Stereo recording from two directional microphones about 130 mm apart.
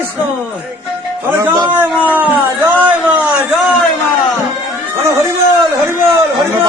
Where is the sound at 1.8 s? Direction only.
15° right (ahead or behind).